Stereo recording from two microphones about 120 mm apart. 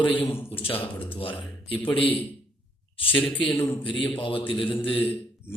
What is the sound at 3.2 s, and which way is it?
Speech, 10° left (ahead or behind).